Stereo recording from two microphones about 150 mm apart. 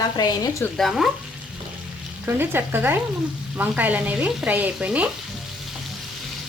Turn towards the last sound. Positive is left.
turn(degrees=-10)  # may be behind; listen again after turning